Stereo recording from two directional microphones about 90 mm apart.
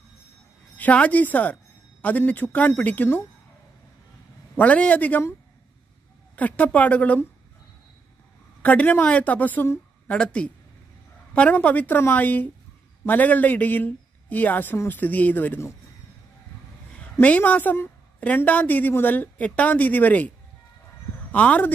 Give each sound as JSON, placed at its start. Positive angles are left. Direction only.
{"t": 0.7, "sound": "a woman's voice", "side_deg": 15}
{"t": 4.6, "sound": "a woman's voice", "side_deg": 15}
{"t": 6.3, "sound": "a woman's voice", "side_deg": 15}
{"t": 8.6, "sound": "a woman's voice", "side_deg": 15}
{"t": 17.2, "sound": "a woman's voice", "side_deg": 15}